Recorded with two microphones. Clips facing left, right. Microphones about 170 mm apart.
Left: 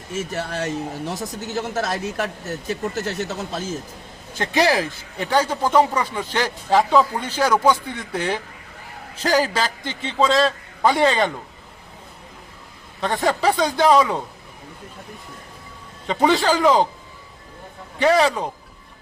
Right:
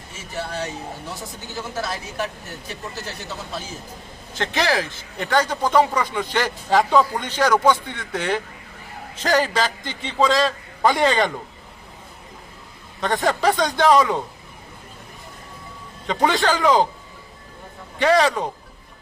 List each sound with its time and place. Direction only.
0.3 s speech: 45° left (ahead or behind)
4.4 s a man's voice: 15° left (ahead or behind)
13.0 s a man's voice: centre (ahead or behind)
16.0 s a man's voice: centre (ahead or behind)
18.0 s a man's voice: centre (ahead or behind)